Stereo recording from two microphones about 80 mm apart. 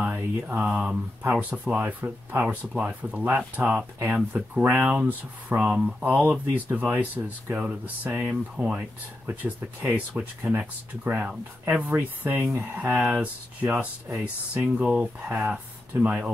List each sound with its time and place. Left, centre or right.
0.1 s mantra: right
1.3 s speech: centre
5.6 s speech: centre